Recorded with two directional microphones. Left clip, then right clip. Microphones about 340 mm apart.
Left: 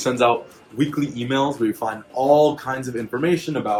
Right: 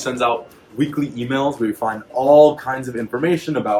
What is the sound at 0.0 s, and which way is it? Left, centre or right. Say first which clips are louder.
Speech: left 1 dB; left.